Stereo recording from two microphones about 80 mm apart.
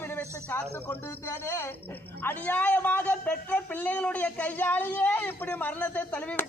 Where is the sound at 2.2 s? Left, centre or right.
Left.